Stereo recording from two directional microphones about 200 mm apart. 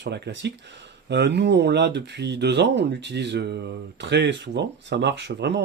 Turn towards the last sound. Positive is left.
turn(degrees=-60)  # may be behind; listen again after turning